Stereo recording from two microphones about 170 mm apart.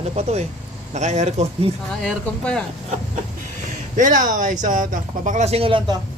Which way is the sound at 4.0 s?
50° right (ahead or behind).